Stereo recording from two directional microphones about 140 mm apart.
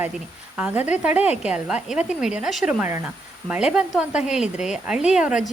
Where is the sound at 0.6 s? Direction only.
10° right (ahead or behind).